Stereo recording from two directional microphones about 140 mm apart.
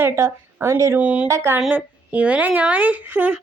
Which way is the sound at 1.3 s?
20° right (ahead or behind).